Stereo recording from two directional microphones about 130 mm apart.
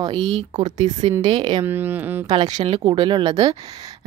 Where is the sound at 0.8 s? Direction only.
55° right (ahead or behind).